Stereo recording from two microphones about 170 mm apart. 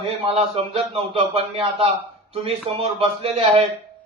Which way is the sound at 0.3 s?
35° right (ahead or behind).